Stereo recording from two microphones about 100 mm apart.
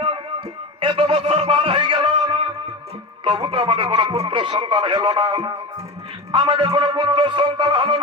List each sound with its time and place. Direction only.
0.0 s music: 65° right (ahead or behind)
3.2 s speech: 55° right (ahead or behind)
6.3 s music: 50° right (ahead or behind)